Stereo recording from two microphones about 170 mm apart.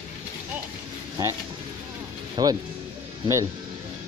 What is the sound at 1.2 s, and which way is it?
Speech, 20° right (ahead or behind).